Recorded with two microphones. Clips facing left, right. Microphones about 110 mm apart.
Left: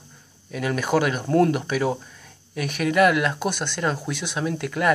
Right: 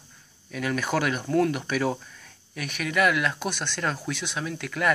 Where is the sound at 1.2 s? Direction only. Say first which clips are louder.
Left 4 dB; 35° left (ahead or behind).